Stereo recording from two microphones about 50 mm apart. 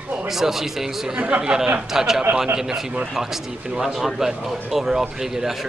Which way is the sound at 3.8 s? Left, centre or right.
Centre.